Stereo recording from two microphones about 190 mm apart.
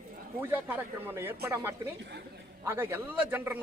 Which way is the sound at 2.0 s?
60° right (ahead or behind).